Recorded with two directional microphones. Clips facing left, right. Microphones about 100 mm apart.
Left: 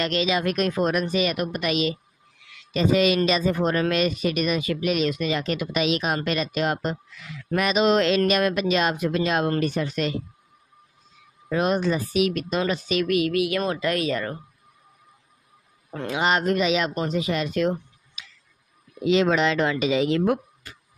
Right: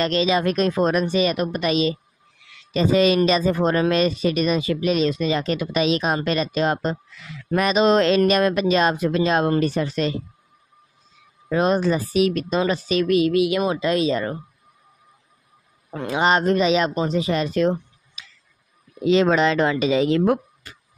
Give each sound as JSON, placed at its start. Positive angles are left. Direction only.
{"t": 0.0, "sound": "speech", "side_deg": -35}
{"t": 11.5, "sound": "speech", "side_deg": -35}
{"t": 16.1, "sound": "speech", "side_deg": -35}